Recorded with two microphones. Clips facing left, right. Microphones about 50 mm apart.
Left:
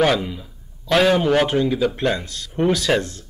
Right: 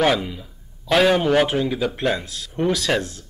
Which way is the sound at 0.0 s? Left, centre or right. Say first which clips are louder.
Left 1 dB; centre.